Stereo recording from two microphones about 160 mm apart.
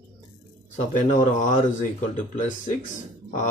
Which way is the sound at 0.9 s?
55° left (ahead or behind).